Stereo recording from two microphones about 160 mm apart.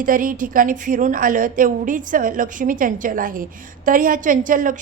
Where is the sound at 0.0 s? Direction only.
60° right (ahead or behind).